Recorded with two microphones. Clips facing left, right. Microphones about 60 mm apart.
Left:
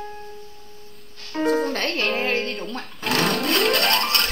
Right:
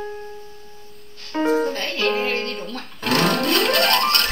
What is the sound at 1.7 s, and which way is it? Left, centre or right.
Music, left.